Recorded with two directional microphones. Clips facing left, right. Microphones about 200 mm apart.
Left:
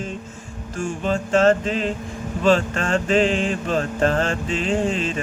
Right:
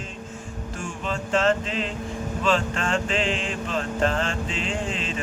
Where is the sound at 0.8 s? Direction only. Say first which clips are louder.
Left 8 dB; 40° left (ahead or behind).